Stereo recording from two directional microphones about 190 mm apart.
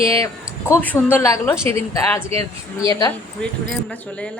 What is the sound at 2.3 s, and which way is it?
Speech, 30° right (ahead or behind).